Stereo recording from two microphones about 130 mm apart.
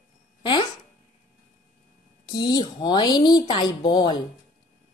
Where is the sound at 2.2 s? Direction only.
35° left (ahead or behind).